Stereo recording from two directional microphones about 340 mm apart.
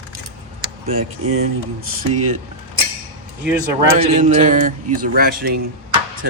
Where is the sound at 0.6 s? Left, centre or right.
Centre.